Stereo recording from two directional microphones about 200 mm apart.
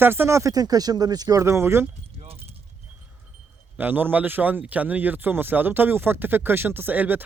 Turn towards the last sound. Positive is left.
turn(degrees=-10)  # may be behind; listen again after turning